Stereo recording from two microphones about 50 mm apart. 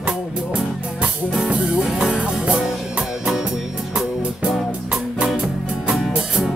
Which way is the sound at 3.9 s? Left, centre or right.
Right.